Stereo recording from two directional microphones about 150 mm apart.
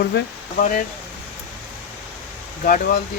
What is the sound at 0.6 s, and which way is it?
Speech, 60° left (ahead or behind).